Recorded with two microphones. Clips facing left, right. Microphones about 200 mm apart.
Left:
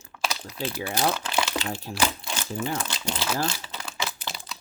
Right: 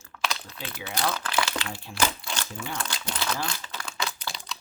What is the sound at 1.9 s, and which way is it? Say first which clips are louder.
Speech: left 2 dB; 50° left (ahead or behind).